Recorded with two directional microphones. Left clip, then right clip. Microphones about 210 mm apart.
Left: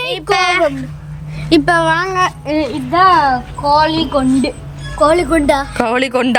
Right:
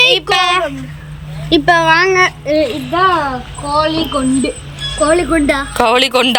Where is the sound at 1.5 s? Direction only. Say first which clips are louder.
Right 1 dB; 15° left (ahead or behind).